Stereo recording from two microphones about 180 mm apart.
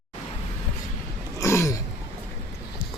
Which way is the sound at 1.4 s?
15° left (ahead or behind).